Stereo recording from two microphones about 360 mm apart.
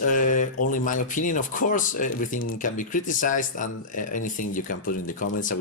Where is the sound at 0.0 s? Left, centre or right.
Left.